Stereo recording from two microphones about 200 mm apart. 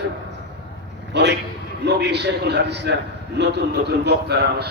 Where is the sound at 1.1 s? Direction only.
60° right (ahead or behind).